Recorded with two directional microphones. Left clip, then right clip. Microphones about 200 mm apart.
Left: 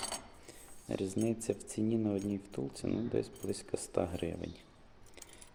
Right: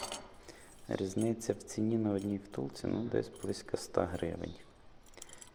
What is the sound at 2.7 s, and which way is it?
Speech, 15° left (ahead or behind).